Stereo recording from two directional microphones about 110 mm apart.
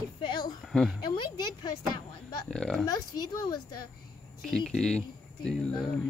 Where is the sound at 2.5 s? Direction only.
5° left (ahead or behind).